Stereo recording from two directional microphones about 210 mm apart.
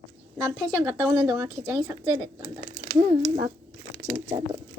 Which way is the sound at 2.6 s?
40° right (ahead or behind).